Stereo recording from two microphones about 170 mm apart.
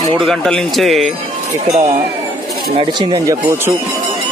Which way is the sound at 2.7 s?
30° right (ahead or behind).